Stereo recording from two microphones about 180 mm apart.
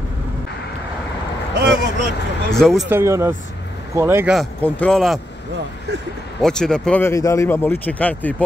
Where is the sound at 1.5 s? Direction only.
75° right (ahead or behind).